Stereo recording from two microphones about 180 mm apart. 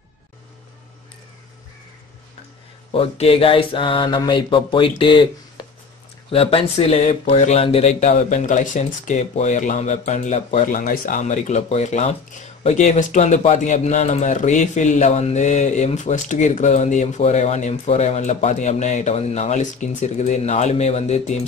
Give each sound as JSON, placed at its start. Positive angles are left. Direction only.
{"t": 2.9, "sound": "mantra", "side_deg": 30}
{"t": 5.6, "sound": "a sound", "side_deg": 25}
{"t": 6.3, "sound": "speech", "side_deg": 35}